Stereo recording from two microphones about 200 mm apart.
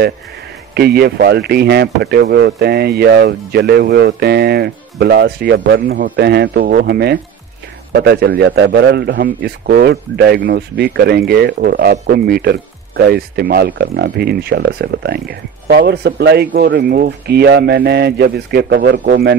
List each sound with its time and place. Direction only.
0.7 s speech: 55° right (ahead or behind)